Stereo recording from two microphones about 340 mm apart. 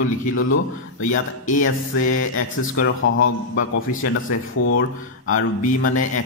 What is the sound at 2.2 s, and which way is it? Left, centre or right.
Speech, left.